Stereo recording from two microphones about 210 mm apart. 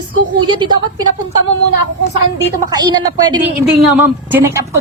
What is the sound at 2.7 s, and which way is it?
Speech, 20° right (ahead or behind).